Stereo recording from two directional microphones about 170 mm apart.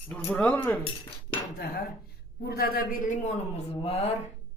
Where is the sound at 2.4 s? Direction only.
65° left (ahead or behind); by 4.1 s 35° left (ahead or behind).